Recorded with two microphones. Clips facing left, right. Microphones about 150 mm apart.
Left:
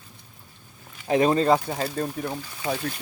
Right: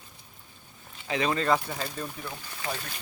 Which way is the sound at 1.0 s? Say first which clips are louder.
Left 9 dB; 50° left (ahead or behind).